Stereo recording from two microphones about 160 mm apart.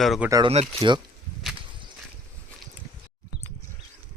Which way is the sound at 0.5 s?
40° right (ahead or behind).